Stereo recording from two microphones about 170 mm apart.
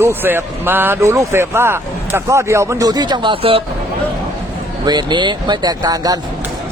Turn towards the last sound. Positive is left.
turn(degrees=-20)  # may be behind; listen again after turning